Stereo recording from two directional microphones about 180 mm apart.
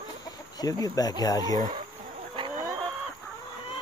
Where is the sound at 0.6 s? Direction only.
20° left (ahead or behind).